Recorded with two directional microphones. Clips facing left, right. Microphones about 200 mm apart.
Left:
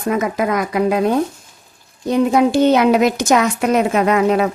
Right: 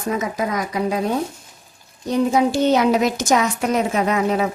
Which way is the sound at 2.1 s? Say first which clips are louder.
Left 4 dB; 60° left (ahead or behind).